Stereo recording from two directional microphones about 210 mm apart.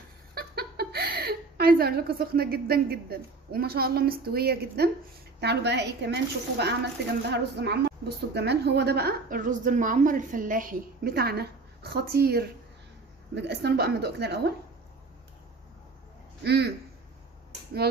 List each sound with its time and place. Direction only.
0.3 s a woman's voice: 50° right (ahead or behind)
7.3 s a woman's voice: 50° right (ahead or behind)
16.4 s a woman's voice: 50° right (ahead or behind)